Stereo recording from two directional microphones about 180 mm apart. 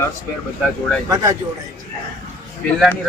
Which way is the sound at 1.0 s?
15° right (ahead or behind).